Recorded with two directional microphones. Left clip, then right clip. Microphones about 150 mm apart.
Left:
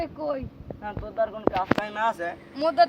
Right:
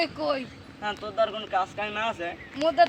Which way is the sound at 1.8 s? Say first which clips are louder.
Left 3 dB; 15° left (ahead or behind).